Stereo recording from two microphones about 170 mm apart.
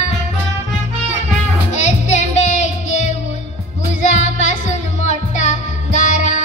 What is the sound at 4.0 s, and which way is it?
Music, 45° left (ahead or behind).